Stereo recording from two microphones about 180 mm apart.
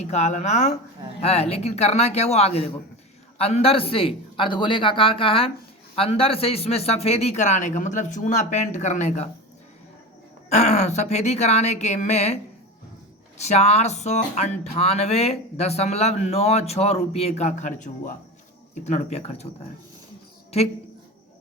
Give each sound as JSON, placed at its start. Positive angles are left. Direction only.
{"t": 0.0, "sound": "speech", "side_deg": 40}
{"t": 10.5, "sound": "speech", "side_deg": 40}
{"t": 13.4, "sound": "speech", "side_deg": 40}